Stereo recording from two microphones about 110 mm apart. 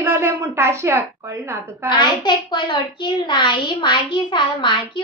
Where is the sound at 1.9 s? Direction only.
45° left (ahead or behind).